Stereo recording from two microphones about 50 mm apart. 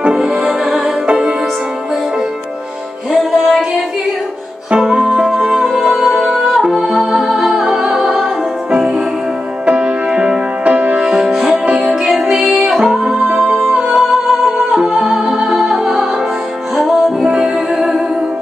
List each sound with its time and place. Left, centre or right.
0.0 s music: centre
1.0 s music: right
3.2 s music: centre
4.6 s music: centre
9.7 s music: right
10.7 s music: right
11.0 s music: centre
17.2 s music: centre